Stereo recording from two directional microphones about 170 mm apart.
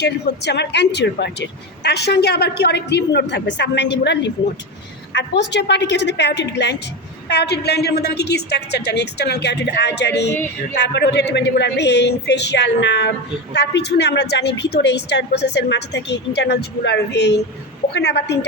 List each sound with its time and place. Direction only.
0.0 s speech: 85° left
7.3 s speech: 80° left
10.3 s a sound: 10° left (ahead or behind)
10.8 s speech: 80° left